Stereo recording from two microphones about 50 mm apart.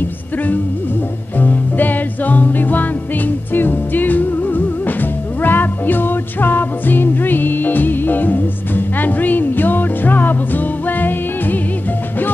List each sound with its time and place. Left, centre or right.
1.4 s music: left